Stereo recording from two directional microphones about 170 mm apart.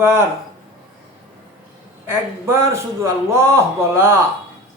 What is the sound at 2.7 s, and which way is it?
A man's voice, 15° right (ahead or behind).